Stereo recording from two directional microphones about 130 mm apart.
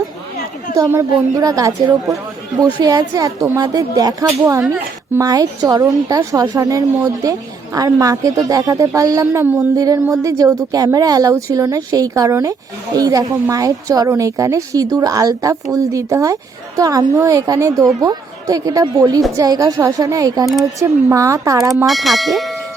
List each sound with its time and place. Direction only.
0.8 s a woman's voice: 25° right (ahead or behind)
4.3 s speech: 15° right (ahead or behind)
4.7 s a sound: 20° right (ahead or behind)
5.3 s a woman's voice: 30° right (ahead or behind)
9.7 s a woman's voice: 25° right (ahead or behind)
21.8 s speech: centre (ahead or behind)